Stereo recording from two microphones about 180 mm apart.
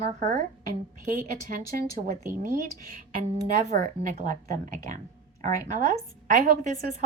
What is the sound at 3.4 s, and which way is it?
Speech, 45° right (ahead or behind).